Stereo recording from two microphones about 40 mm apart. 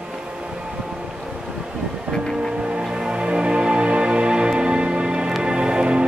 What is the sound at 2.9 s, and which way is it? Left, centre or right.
Music, right.